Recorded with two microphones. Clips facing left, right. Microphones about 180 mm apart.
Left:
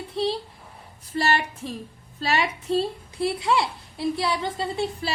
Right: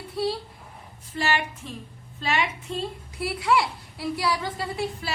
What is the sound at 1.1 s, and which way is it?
A woman's voice, 35° left (ahead or behind).